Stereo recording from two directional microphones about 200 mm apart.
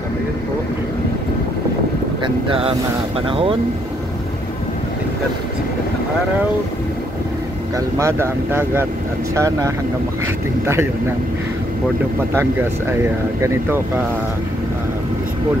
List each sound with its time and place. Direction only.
2.2 s speech: 25° right (ahead or behind)
7.7 s speech: 15° right (ahead or behind)
12.4 s speech: 10° right (ahead or behind)